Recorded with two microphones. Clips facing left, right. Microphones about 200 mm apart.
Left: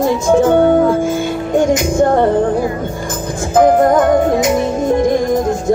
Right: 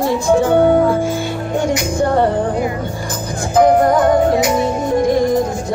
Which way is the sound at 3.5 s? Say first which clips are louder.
Left 2 dB; 50° left (ahead or behind).